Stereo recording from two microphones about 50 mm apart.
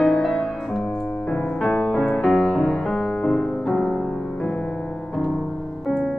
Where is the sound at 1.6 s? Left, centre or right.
Left; by 3.9 s centre.